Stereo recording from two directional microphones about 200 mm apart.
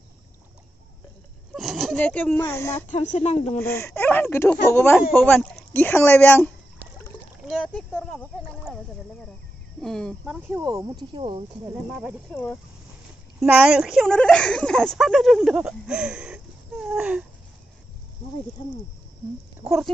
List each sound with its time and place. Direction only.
1.5 s speech: centre (ahead or behind)
2.9 s speech: 35° left (ahead or behind)
3.5 s speech: 10° left (ahead or behind)
7.4 s speech: centre (ahead or behind)
9.8 s speech: centre (ahead or behind)
10.5 s speech: 15° right (ahead or behind)
11.9 s speech: 5° right (ahead or behind)
13.4 s speech: 5° right (ahead or behind)